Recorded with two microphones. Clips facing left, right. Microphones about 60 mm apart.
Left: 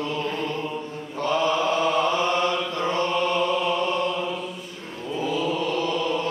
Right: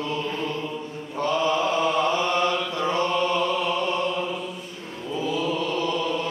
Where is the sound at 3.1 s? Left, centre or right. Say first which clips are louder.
Even; centre.